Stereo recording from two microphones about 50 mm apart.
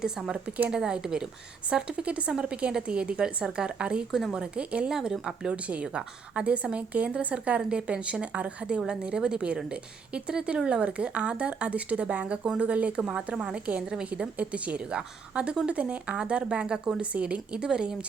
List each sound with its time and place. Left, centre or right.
0.7 s a woman's voice: centre
4.1 s a woman's voice: centre
4.4 s a woman's voice: right
4.9 s a woman's voice: centre
17.0 s a woman's voice: right